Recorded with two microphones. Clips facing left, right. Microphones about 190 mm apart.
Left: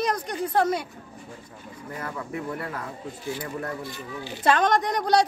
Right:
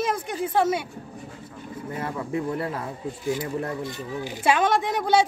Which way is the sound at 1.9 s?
30° right (ahead or behind).